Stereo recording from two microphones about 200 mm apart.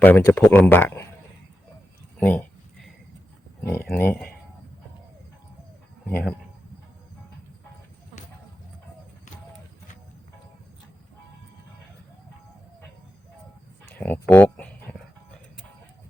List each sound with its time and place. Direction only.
0.0 s speech: 10° left (ahead or behind)
2.1 s a sound: 10° left (ahead or behind)
3.6 s speech: 10° left (ahead or behind)
6.1 s speech: 5° left (ahead or behind)
14.0 s speech: 10° left (ahead or behind)